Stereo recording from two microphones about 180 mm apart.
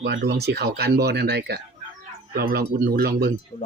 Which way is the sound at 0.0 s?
85° right.